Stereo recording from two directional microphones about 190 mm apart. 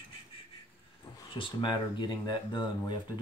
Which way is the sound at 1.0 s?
25° left (ahead or behind).